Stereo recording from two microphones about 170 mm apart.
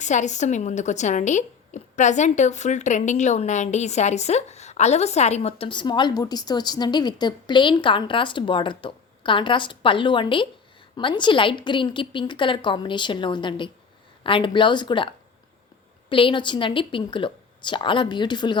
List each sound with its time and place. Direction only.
0.0 s a woman's voice: 45° left (ahead or behind); by 18.5 s 25° left (ahead or behind)